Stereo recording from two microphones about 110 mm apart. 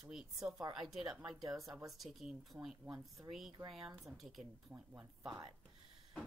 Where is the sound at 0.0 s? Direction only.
5° right (ahead or behind).